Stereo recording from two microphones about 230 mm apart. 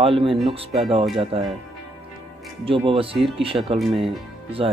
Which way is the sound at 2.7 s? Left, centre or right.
Right.